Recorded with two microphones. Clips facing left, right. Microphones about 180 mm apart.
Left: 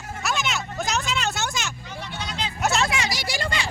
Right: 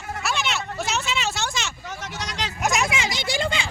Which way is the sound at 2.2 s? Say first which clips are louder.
Even; 85° right.